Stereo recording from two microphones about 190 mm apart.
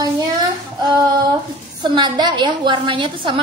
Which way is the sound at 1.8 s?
20° right (ahead or behind).